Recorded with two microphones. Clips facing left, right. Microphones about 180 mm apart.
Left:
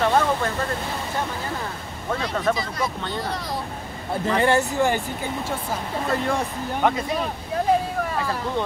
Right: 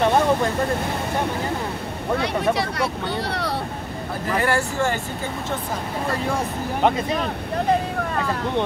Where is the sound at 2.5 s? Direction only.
70° right (ahead or behind).